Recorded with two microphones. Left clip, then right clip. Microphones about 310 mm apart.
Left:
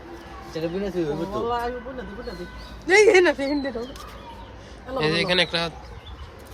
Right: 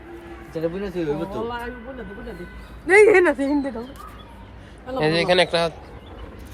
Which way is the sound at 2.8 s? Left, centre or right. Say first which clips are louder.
Right 2 dB; centre.